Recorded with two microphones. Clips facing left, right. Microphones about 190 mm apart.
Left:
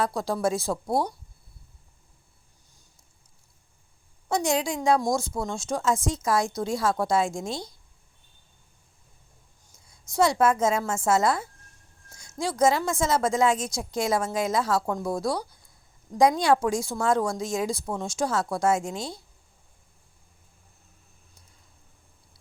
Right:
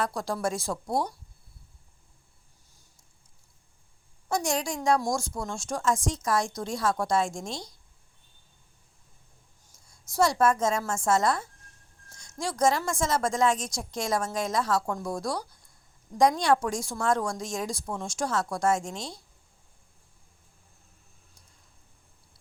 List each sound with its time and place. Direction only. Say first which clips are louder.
0.4 s a woman's voice: left 5 dB; 5° left (ahead or behind)
4.3 s a woman's voice: left 3 dB; centre (ahead or behind)
9.8 s a sound: left 2 dB; centre (ahead or behind)
10.4 s a woman's voice: left 2 dB; 5° left (ahead or behind)
14.8 s speech: left 3 dB; 20° left (ahead or behind)
15.1 s a woman's voice: left 4 dB; 5° left (ahead or behind)